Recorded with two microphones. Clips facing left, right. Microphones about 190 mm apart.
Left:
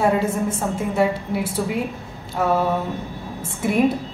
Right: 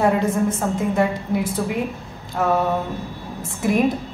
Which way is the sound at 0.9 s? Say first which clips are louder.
Even; 5° left (ahead or behind).